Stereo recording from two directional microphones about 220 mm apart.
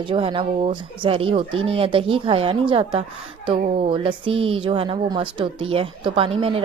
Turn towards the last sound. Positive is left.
turn(degrees=-25)  # may be behind; listen again after turning